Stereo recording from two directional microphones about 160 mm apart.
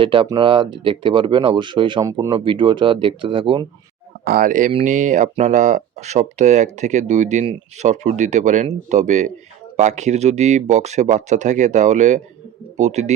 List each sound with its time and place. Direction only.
0.0 s speech: 30° right (ahead or behind)
4.2 s speech: 65° right (ahead or behind); by 13.1 s 45° right (ahead or behind)